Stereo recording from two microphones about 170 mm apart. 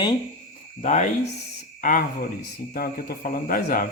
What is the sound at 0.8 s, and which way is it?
Speech, 40° left (ahead or behind).